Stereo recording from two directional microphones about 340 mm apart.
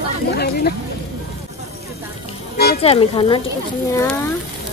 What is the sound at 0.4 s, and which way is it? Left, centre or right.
Speech, left.